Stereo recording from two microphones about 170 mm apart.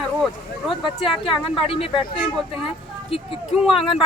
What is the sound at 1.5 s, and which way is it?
Speech, 30° left (ahead or behind).